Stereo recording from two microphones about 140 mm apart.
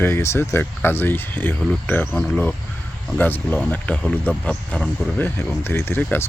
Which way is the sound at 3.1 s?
10° left (ahead or behind).